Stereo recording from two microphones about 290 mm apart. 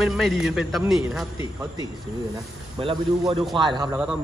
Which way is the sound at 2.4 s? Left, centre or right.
Centre.